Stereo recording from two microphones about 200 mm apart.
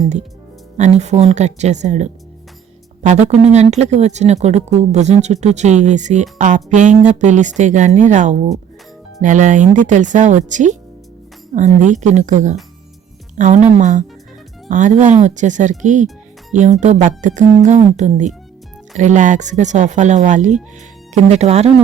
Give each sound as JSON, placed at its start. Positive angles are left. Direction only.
{"t": 0.8, "sound": "speech", "side_deg": -35}